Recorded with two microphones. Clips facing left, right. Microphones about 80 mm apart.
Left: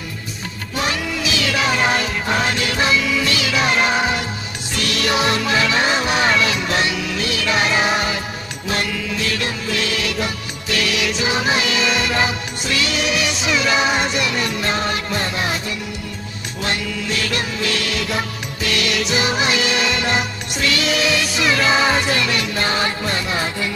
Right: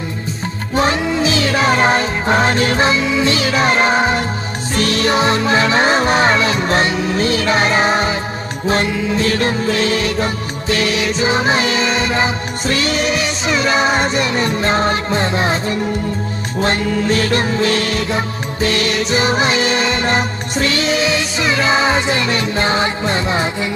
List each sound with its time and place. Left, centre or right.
0.7 s music: right